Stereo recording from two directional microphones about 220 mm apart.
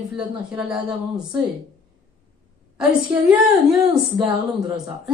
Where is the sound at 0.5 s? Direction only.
5° right (ahead or behind).